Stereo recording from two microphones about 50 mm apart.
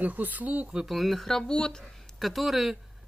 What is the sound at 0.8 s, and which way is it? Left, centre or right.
Speech, centre.